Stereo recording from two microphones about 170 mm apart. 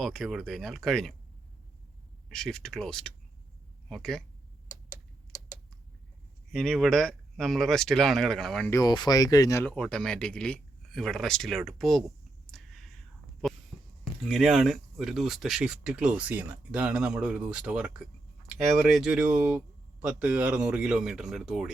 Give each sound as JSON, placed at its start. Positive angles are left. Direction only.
{"t": 0.0, "sound": "speech", "side_deg": 0}
{"t": 2.3, "sound": "speech", "side_deg": 5}
{"t": 4.7, "sound": "tick-tock", "side_deg": 20}
{"t": 6.5, "sound": "speech", "side_deg": 5}
{"t": 8.7, "sound": "speech", "side_deg": 25}
{"t": 9.7, "sound": "speech", "side_deg": 5}
{"t": 12.5, "sound": "a sound", "side_deg": 0}
{"t": 14.3, "sound": "speech", "side_deg": 0}